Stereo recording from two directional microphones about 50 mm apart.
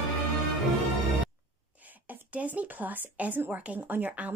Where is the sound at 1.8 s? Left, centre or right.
Right.